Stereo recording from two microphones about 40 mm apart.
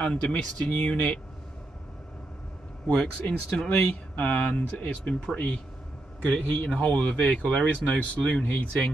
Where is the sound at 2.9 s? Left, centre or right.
Left.